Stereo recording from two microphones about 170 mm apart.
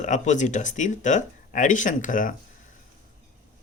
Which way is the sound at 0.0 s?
45° left (ahead or behind).